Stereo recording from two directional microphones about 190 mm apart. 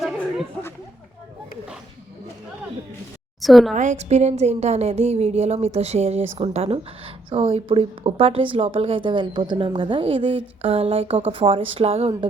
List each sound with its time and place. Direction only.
3.4 s a woman's voice: centre (ahead or behind)
3.8 s a woman's voice: 35° right (ahead or behind)